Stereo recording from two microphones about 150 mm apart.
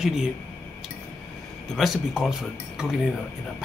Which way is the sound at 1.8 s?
Centre (ahead or behind).